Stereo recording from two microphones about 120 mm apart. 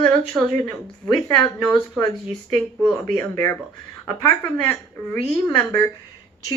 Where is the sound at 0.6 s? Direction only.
10° left (ahead or behind).